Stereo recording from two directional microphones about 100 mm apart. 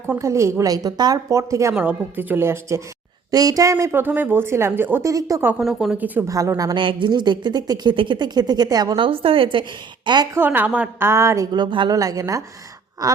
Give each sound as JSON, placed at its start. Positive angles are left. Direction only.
{"t": 0.2, "sound": "a woman's voice", "side_deg": -30}
{"t": 1.7, "sound": "a woman's voice", "side_deg": -15}
{"t": 3.9, "sound": "speech", "side_deg": -20}
{"t": 5.0, "sound": "a woman's voice", "side_deg": -35}
{"t": 5.5, "sound": "speech", "side_deg": -5}
{"t": 6.2, "sound": "a woman's voice", "side_deg": -30}
{"t": 6.7, "sound": "a woman's voice", "side_deg": -55}
{"t": 9.0, "sound": "a woman's voice", "side_deg": -65}
{"t": 10.3, "sound": "speech", "side_deg": -20}
{"t": 11.0, "sound": "speech", "side_deg": -30}
{"t": 11.5, "sound": "a woman's voice", "side_deg": -50}
{"t": 11.9, "sound": "a woman's voice", "side_deg": -35}